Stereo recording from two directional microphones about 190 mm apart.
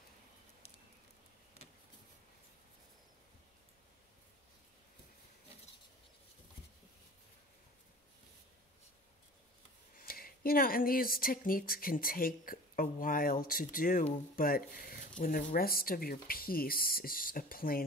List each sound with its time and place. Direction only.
9.9 s speech: 50° left (ahead or behind)